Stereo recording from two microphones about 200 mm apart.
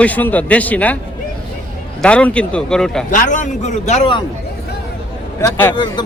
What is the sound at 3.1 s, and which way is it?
A man's voice, 40° left (ahead or behind).